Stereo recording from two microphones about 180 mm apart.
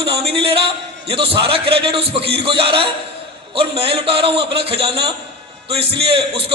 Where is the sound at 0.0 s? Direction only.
30° right (ahead or behind).